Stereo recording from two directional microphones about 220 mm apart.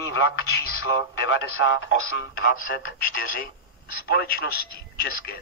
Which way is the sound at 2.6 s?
40° left (ahead or behind).